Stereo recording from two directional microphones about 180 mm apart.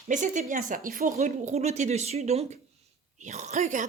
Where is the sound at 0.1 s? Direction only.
45° right (ahead or behind).